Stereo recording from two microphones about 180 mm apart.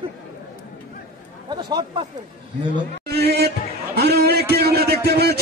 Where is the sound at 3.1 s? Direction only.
65° right (ahead or behind).